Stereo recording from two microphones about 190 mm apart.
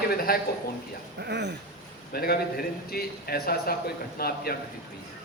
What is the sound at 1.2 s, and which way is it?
Speech, 65° right (ahead or behind).